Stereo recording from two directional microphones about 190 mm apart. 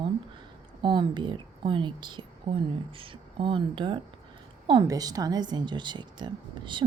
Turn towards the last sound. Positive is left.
turn(degrees=-25)  # may be behind; listen again after turning